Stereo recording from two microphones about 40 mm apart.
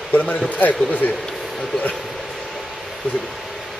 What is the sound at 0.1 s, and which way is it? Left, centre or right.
Speech, left.